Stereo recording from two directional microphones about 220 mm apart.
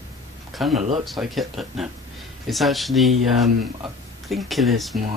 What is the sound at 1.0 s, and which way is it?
Speech, centre (ahead or behind).